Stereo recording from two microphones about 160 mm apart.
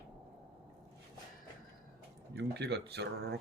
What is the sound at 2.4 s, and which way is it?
Speech, 90° right.